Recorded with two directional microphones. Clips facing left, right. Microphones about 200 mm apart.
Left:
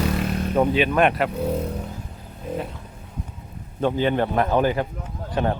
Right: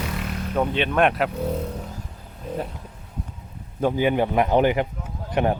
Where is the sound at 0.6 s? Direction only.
5° left (ahead or behind).